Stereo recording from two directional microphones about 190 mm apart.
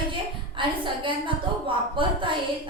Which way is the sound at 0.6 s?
25° right (ahead or behind).